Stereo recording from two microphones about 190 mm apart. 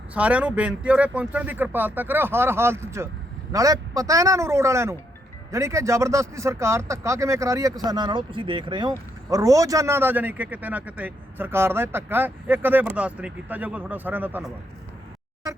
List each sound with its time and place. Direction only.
0.1 s speech: 5° right (ahead or behind)